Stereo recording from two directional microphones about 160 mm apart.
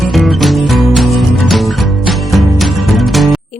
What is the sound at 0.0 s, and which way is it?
Music, centre (ahead or behind).